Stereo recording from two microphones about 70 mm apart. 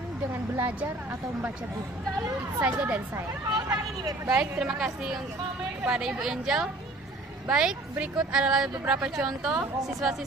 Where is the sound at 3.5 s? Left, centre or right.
Right.